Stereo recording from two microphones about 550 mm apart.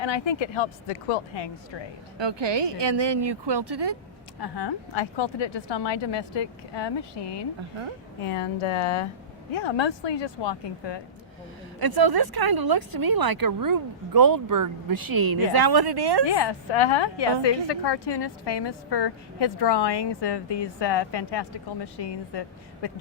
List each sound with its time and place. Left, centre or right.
0.0 s a woman's voice: left
2.1 s speech: right
4.4 s a woman's voice: left
8.2 s a woman's voice: left
11.8 s speech: right
16.2 s a woman's voice: left